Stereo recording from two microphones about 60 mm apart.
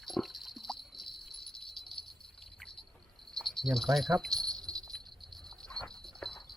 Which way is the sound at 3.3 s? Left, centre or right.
Centre.